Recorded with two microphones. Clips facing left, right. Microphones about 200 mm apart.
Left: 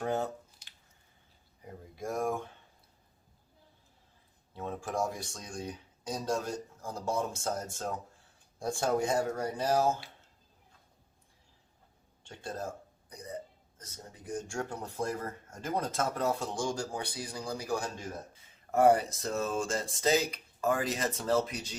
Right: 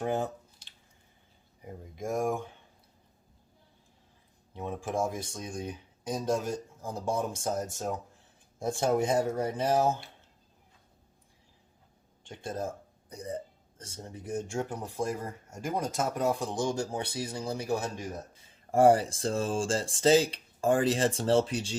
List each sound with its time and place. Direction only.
0.0 s speech: 15° right (ahead or behind)
1.6 s speech: 15° right (ahead or behind)
4.5 s speech: 15° right (ahead or behind)
12.2 s speech: 20° right (ahead or behind)